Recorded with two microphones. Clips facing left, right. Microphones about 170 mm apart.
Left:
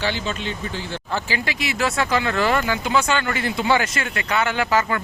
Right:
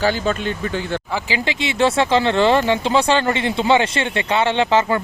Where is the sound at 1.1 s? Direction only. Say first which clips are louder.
Left 1 dB; 20° right (ahead or behind).